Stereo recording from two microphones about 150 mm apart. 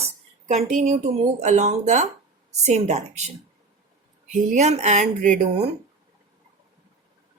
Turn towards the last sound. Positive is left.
turn(degrees=-55)  # may be behind; listen again after turning